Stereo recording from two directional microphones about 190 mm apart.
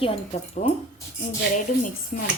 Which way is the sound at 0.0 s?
30° left (ahead or behind).